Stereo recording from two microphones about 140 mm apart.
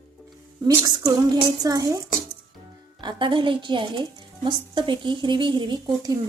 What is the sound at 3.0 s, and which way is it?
A woman's voice, 35° right (ahead or behind).